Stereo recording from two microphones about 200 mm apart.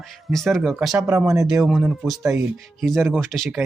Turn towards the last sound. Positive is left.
turn(degrees=0)  # may be behind; listen again after turning